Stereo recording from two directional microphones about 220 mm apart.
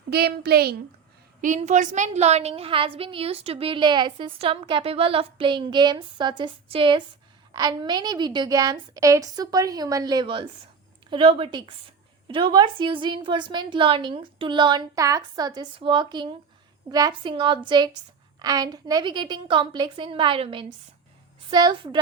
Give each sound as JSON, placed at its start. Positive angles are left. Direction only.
{"t": 0.1, "sound": "a child's voice", "side_deg": -45}
{"t": 1.4, "sound": "a woman's voice", "side_deg": -35}